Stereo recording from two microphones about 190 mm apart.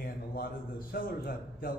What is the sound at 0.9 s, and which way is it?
Speech, 50° left (ahead or behind).